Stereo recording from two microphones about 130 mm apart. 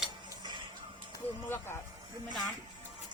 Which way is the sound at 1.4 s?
15° left (ahead or behind).